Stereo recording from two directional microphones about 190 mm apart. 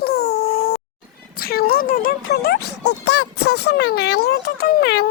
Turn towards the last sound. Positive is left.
turn(degrees=55)  # may be behind; listen again after turning